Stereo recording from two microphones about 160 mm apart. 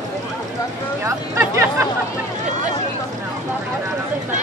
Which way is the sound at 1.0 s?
15° right (ahead or behind).